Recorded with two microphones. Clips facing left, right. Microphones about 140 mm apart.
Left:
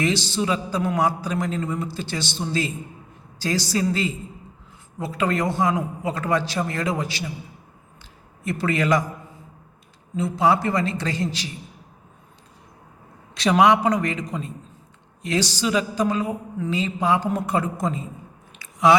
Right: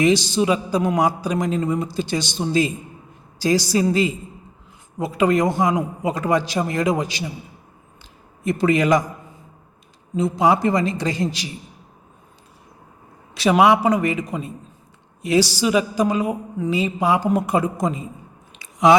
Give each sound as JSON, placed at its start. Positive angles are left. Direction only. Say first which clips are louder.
{"t": 0.0, "sound": "a man's voice", "louder": "right 6 dB", "side_deg": -15}
{"t": 8.4, "sound": "a man's voice", "louder": "right 4 dB", "side_deg": -15}
{"t": 10.2, "sound": "a man's voice", "louder": "right 2 dB", "side_deg": -15}
{"t": 13.3, "sound": "a man's voice", "louder": "right 2 dB", "side_deg": -5}
{"t": 18.6, "sound": "chewing", "louder": "right 2 dB", "side_deg": -20}